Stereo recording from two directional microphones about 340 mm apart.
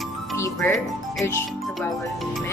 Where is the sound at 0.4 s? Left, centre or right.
Centre.